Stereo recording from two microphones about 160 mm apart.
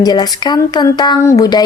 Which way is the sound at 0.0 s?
25° left (ahead or behind).